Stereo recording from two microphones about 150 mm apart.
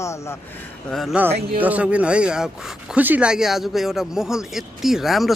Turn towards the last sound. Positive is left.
turn(degrees=0)  # may be behind; listen again after turning